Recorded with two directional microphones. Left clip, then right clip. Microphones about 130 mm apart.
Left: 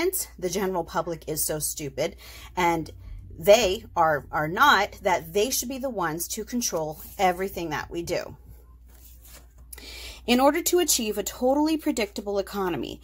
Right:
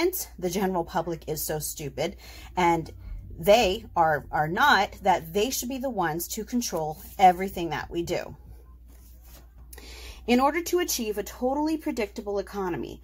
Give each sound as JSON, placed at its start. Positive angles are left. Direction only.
{"t": 0.0, "sound": "a woman's voice", "side_deg": 5}
{"t": 9.8, "sound": "speech", "side_deg": 30}